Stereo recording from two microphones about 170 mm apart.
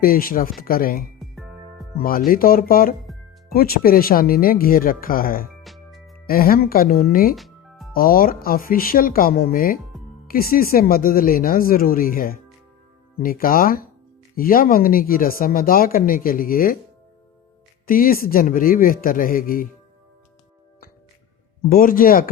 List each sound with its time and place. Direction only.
0.0 s speech: 60° left (ahead or behind)
1.2 s music: centre (ahead or behind)
2.0 s speech: 60° left (ahead or behind)
5.6 s music: centre (ahead or behind)
6.2 s speech: 60° left (ahead or behind)
7.3 s music: centre (ahead or behind)
7.9 s speech: 60° left (ahead or behind)
17.8 s speech: 55° left (ahead or behind)
21.7 s speech: 55° left (ahead or behind)